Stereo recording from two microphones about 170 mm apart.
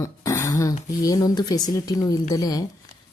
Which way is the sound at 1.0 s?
20° left (ahead or behind).